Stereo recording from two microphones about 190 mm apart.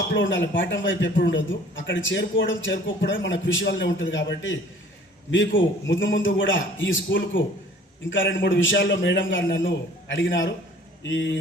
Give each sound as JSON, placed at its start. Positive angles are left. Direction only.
{"t": 0.1, "sound": "a man's voice", "side_deg": 70}
{"t": 5.5, "sound": "a man's voice", "side_deg": 75}